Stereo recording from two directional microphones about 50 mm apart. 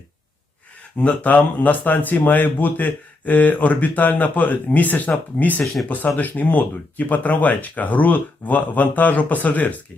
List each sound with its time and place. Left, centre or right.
0.9 s speech: left